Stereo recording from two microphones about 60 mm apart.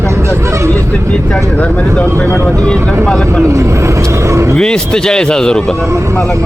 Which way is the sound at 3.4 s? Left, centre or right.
Right.